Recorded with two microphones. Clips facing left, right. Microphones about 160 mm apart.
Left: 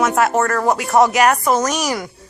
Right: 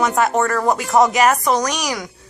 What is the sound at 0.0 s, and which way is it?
Speech, centre (ahead or behind).